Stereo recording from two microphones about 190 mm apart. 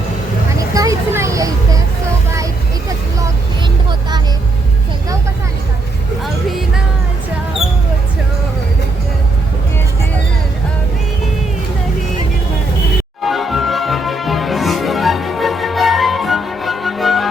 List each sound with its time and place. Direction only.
0.7 s a sound: 15° right (ahead or behind)
6.2 s music: centre (ahead or behind)
13.2 s music: centre (ahead or behind)